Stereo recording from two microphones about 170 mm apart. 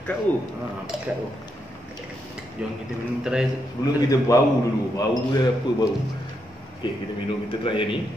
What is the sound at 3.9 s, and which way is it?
A man's voice, 20° left (ahead or behind).